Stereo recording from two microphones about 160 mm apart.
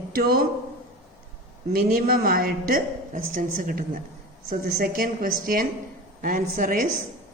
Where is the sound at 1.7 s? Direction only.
70° right (ahead or behind).